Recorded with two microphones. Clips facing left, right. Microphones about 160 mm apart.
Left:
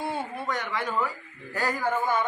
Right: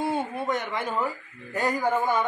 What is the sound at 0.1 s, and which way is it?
A woman's voice, 25° right (ahead or behind).